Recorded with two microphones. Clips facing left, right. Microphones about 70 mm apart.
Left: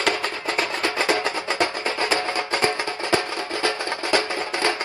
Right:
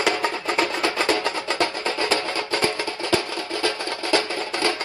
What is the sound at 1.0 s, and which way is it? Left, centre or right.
Music, left.